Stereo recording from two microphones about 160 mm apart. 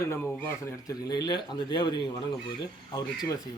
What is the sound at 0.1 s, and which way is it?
Speech, 15° left (ahead or behind).